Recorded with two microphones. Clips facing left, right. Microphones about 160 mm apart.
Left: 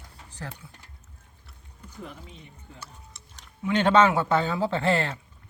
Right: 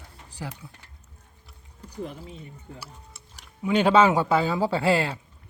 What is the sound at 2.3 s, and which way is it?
Speech, 10° right (ahead or behind).